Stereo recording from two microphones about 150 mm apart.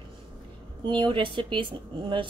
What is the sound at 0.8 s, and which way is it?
Speech, 35° right (ahead or behind).